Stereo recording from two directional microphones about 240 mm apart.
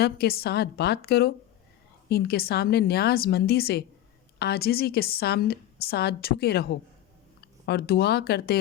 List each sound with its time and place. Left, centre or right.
0.0 s a woman's voice: left